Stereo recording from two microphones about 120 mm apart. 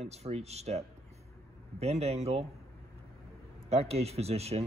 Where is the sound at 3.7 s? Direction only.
60° right (ahead or behind).